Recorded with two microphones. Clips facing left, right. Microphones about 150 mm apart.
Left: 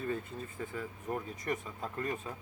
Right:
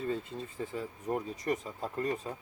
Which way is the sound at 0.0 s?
25° right (ahead or behind).